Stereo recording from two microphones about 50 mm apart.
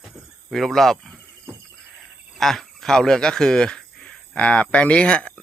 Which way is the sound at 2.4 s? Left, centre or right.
Centre.